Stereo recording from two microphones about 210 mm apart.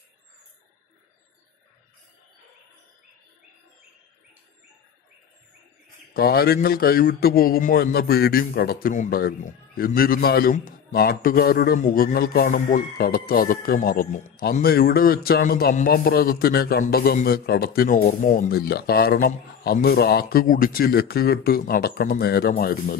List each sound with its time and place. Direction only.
6.1 s a man's voice: 45° left (ahead or behind)